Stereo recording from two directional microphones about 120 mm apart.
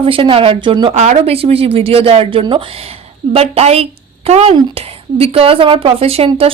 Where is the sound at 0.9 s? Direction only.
75° right (ahead or behind).